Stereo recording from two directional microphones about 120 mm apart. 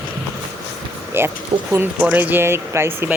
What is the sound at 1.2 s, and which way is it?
A child's voice, 20° right (ahead or behind).